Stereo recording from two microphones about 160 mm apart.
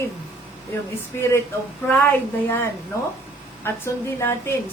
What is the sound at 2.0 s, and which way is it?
Speech, 15° left (ahead or behind).